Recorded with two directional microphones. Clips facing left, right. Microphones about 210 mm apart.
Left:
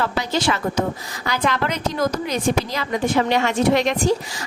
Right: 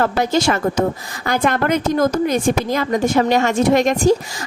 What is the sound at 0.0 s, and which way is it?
A woman's voice, 50° right (ahead or behind).